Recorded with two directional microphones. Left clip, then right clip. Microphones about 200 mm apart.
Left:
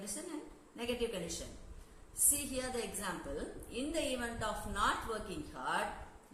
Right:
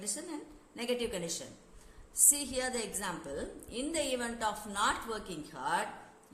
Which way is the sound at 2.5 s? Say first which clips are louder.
Right 4 dB; 55° right (ahead or behind).